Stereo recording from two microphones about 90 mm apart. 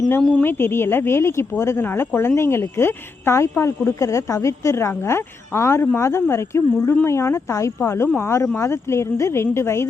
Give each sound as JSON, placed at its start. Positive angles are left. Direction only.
{"t": 0.2, "sound": "speech", "side_deg": 10}
{"t": 0.4, "sound": "speech", "side_deg": 25}